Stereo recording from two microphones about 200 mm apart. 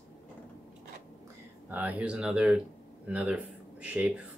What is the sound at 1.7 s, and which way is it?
Speech, 10° right (ahead or behind).